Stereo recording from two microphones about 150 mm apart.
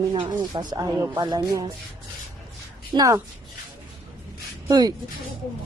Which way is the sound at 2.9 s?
20° right (ahead or behind).